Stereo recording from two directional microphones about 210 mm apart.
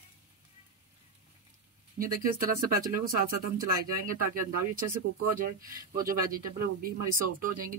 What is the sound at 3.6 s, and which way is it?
Speech, 40° right (ahead or behind).